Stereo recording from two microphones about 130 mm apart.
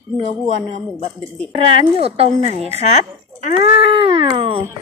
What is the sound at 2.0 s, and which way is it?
Speech, 50° right (ahead or behind).